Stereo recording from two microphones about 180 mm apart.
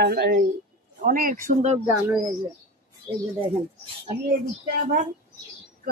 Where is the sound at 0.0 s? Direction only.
65° right (ahead or behind).